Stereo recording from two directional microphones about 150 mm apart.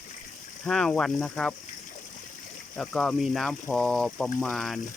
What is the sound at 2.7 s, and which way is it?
Speech, 5° left (ahead or behind).